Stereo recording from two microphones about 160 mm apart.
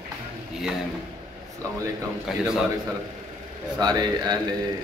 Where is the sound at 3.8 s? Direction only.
25° right (ahead or behind).